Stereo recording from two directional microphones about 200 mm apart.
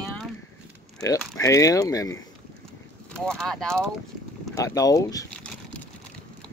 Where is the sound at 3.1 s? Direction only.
5° left (ahead or behind).